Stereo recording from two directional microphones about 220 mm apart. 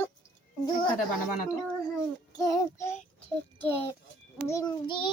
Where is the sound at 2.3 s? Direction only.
15° left (ahead or behind).